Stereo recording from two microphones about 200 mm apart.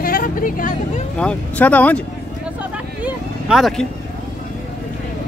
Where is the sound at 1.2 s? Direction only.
5° left (ahead or behind).